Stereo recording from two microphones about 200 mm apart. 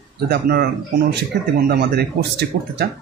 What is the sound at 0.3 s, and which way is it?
Speech, 50° right (ahead or behind).